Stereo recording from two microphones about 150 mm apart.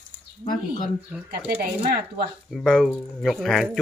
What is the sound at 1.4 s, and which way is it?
Speech, 85° right.